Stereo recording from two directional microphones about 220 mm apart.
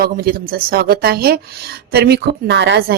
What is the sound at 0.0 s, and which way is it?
A woman's voice, 40° right (ahead or behind).